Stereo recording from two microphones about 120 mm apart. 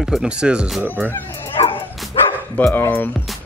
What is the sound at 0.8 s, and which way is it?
Speech, 15° right (ahead or behind).